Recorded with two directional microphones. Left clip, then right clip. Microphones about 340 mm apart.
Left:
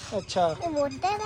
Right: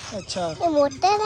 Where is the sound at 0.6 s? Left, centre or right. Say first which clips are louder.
Right 8 dB; right.